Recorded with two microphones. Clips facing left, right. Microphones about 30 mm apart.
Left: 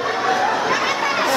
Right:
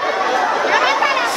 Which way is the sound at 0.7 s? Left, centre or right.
Right.